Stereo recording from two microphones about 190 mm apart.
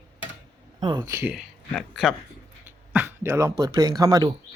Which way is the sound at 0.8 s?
25° right (ahead or behind).